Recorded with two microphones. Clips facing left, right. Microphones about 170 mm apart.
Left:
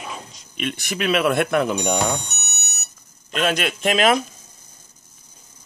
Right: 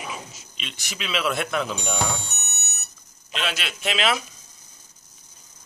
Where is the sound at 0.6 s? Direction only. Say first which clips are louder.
Left 11 dB; 55° left (ahead or behind).